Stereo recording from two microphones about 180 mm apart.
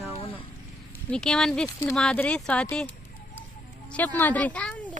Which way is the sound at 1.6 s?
15° left (ahead or behind).